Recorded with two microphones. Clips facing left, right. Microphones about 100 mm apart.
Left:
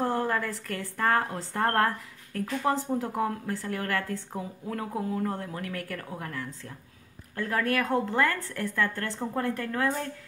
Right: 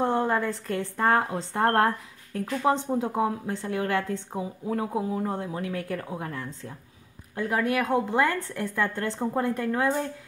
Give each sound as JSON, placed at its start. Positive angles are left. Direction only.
{"t": 0.0, "sound": "a woman's voice", "side_deg": -20}